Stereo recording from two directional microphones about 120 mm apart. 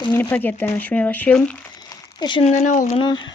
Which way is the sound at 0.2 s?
15° left (ahead or behind).